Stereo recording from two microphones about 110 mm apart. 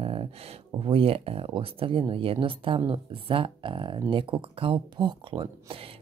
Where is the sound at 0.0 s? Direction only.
60° right (ahead or behind).